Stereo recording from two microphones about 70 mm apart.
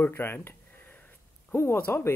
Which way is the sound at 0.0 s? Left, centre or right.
Left.